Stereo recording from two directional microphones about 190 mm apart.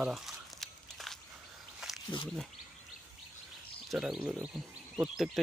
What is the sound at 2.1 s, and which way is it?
Speech, 25° left (ahead or behind).